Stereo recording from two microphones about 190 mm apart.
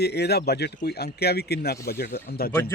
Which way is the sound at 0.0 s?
60° left (ahead or behind).